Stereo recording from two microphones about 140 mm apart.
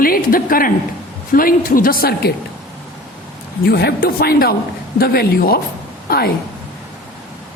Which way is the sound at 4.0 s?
90° left.